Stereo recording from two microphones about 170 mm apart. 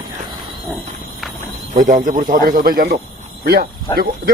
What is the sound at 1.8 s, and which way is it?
Speech, 50° right (ahead or behind).